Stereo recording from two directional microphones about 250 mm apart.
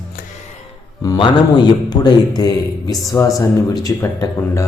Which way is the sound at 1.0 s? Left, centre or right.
Centre.